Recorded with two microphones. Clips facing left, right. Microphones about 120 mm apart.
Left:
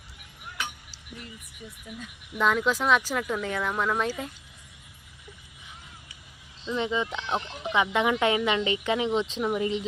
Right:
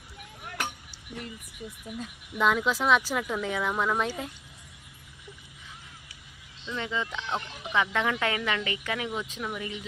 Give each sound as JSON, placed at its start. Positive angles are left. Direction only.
{"t": 2.4, "sound": "speech", "side_deg": 0}
{"t": 6.7, "sound": "speech", "side_deg": 20}